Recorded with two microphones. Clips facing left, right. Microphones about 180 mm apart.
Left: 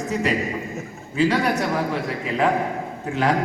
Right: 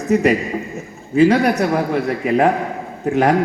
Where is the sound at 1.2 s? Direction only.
55° right (ahead or behind).